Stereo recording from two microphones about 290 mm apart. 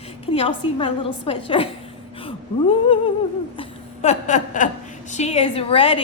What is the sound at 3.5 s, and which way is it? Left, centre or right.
A woman's voice, left.